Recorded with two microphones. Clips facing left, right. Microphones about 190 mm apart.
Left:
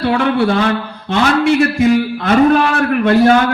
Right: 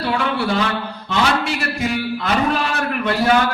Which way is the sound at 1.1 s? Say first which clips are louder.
Left 8 dB; 55° left (ahead or behind).